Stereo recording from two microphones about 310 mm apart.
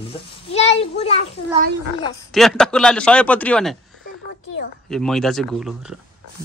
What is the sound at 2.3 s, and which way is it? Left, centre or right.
Speech, centre.